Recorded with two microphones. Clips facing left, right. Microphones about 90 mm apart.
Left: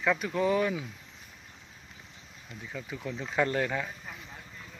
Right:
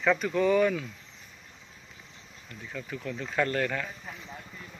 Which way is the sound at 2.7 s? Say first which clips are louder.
Right 1 dB; 15° left (ahead or behind).